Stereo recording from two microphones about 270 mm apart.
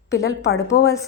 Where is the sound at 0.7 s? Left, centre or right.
Left.